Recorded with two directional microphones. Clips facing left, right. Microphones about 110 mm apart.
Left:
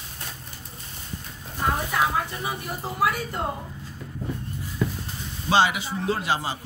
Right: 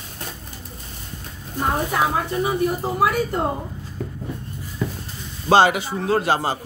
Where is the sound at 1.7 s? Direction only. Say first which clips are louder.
Right 4 dB; 35° right (ahead or behind).